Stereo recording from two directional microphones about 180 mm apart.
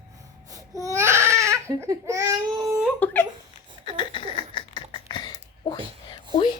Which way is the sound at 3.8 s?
25° left (ahead or behind).